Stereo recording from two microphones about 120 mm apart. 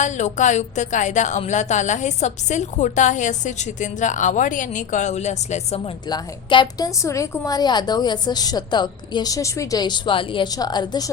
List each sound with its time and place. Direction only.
0.0 s speech: 90° left; by 5.8 s 70° left (ahead or behind)
6.1 s a woman's voice: 40° left (ahead or behind)